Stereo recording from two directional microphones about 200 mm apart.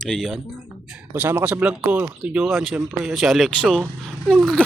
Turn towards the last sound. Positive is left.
turn(degrees=0)  # may be behind; listen again after turning